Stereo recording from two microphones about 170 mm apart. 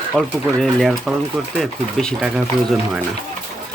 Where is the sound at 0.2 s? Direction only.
Centre (ahead or behind).